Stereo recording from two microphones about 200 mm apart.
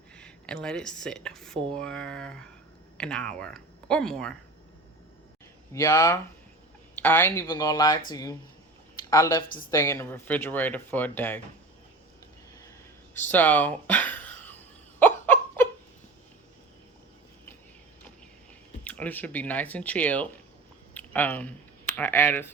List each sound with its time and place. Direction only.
0.2 s speech: 5° left (ahead or behind)
5.7 s speech: 15° left (ahead or behind)
13.1 s a sound: 10° left (ahead or behind)
18.9 s speech: 5° left (ahead or behind)
20.9 s a sound: 10° left (ahead or behind)
21.9 s speech: 10° left (ahead or behind)